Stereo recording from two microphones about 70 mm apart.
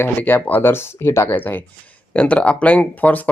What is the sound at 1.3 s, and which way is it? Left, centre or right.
Speech, left.